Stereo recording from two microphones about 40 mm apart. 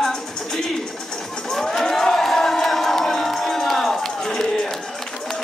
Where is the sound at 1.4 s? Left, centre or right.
Centre.